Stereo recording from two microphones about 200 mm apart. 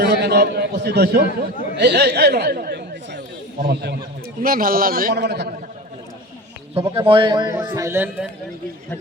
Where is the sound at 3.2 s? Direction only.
40° right (ahead or behind).